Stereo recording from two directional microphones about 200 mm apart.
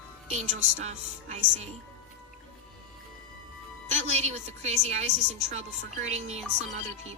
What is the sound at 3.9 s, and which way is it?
A woman's voice, 35° right (ahead or behind).